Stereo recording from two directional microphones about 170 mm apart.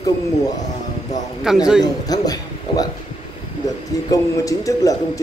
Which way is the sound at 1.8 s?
20° left (ahead or behind).